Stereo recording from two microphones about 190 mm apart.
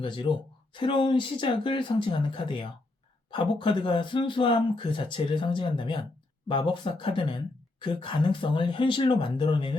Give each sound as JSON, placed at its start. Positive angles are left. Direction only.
{"t": 0.0, "sound": "speech", "side_deg": 25}